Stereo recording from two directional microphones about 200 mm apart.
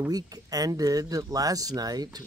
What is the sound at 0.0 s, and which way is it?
Speech, 20° right (ahead or behind).